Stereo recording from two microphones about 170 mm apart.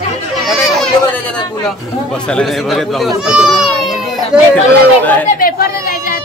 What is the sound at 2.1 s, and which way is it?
Speech, 5° left (ahead or behind).